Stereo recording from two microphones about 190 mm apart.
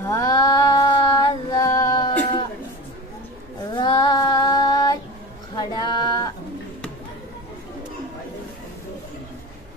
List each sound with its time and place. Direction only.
0.0 s music: 15° left (ahead or behind)
3.7 s female singing: 25° left (ahead or behind)
5.6 s a sound: 25° left (ahead or behind)